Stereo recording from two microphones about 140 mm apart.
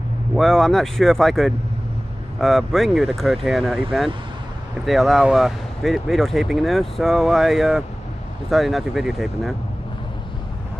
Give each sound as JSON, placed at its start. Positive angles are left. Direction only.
{"t": 0.4, "sound": "speech", "side_deg": 0}
{"t": 4.8, "sound": "speech", "side_deg": 0}